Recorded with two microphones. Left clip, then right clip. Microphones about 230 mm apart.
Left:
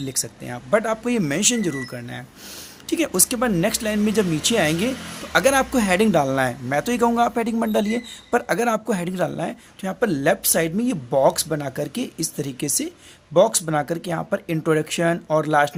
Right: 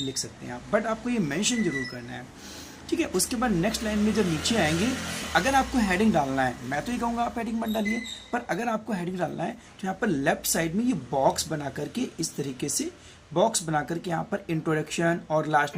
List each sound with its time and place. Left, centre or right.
0.1 s speech: left